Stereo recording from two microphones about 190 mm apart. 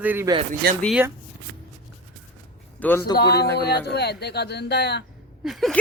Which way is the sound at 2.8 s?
10° left (ahead or behind).